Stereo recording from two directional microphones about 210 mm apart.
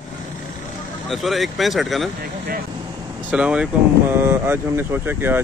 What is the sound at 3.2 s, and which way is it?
Speech, 5° right (ahead or behind).